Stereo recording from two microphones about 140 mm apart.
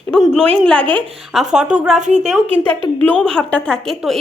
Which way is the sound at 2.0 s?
55° right (ahead or behind).